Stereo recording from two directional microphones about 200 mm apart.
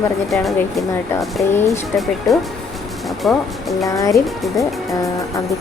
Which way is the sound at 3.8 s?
15° left (ahead or behind).